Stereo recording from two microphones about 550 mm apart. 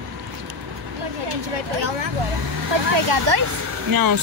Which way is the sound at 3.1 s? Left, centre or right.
Right.